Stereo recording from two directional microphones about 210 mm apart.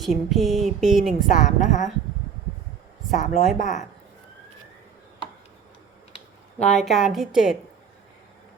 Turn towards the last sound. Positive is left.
turn(degrees=0)  # may be behind; listen again after turning